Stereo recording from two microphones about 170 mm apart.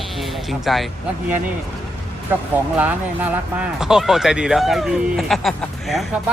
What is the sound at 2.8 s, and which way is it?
Speech, 10° right (ahead or behind).